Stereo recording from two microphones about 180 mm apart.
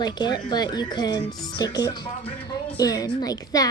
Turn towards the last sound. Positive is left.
turn(degrees=20)  # may be behind; listen again after turning